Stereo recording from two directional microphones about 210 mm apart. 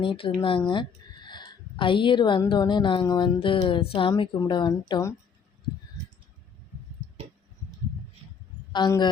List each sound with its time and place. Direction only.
0.0 s speech: 25° left (ahead or behind)
8.7 s a man's voice: 20° left (ahead or behind)